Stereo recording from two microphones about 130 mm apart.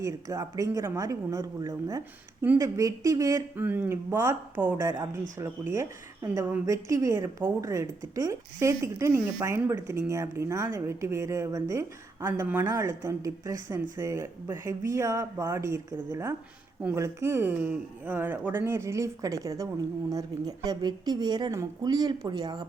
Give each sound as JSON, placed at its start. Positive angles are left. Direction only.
{"t": 0.0, "sound": "speech", "side_deg": -25}
{"t": 3.6, "sound": "a woman's voice", "side_deg": -15}